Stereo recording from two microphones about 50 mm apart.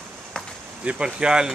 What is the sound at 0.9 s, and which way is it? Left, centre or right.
Speech, centre.